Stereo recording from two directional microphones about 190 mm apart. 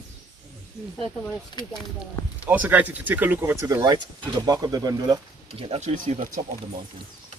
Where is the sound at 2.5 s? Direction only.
10° right (ahead or behind).